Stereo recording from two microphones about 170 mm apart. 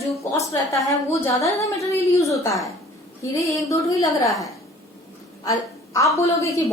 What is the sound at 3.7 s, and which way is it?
Speech, 20° left (ahead or behind).